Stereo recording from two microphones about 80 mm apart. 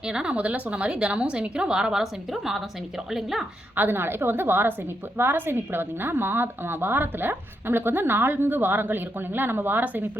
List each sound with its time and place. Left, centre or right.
0.0 s a woman's voice: centre
3.8 s a woman's voice: right